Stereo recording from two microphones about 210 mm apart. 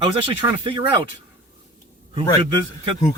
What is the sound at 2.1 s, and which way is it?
Speech, 25° right (ahead or behind).